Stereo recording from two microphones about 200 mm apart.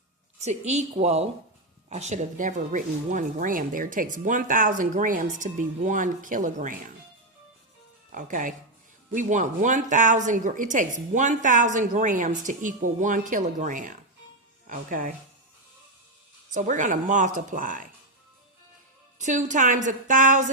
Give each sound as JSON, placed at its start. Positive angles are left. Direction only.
{"t": 0.3, "sound": "speech", "side_deg": -35}
{"t": 8.1, "sound": "speech", "side_deg": -40}
{"t": 16.6, "sound": "speech", "side_deg": -40}
{"t": 19.2, "sound": "speech", "side_deg": -35}